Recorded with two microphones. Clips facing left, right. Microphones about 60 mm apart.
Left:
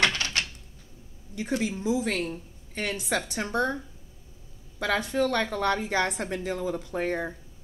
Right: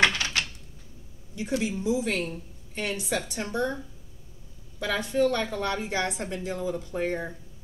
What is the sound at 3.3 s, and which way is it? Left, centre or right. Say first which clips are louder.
Speech: left 2 dB; left.